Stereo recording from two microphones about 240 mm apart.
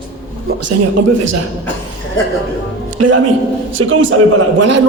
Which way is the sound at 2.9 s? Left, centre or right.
Right.